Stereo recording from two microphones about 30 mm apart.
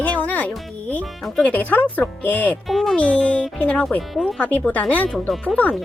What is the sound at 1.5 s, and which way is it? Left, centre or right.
Speech, left.